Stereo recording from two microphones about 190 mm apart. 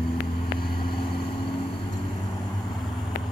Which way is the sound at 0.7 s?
25° left (ahead or behind).